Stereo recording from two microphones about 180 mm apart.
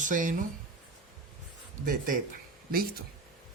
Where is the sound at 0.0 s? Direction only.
45° right (ahead or behind).